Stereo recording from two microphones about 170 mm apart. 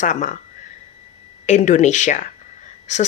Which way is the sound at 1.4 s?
45° left (ahead or behind).